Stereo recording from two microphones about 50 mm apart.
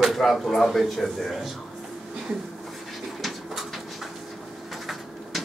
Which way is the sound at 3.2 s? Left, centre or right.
Centre.